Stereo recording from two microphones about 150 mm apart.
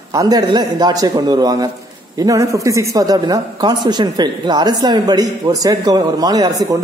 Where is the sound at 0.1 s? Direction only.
25° right (ahead or behind).